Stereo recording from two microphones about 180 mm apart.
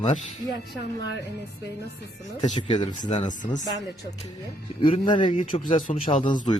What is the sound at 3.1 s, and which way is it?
Speech, 40° left (ahead or behind).